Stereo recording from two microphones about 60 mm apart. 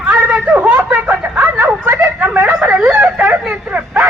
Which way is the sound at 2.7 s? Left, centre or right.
Centre.